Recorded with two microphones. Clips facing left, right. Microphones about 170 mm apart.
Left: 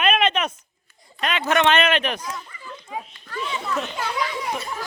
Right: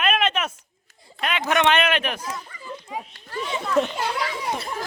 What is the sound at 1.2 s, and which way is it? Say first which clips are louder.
Speech: left 1 dB; 10° right (ahead or behind).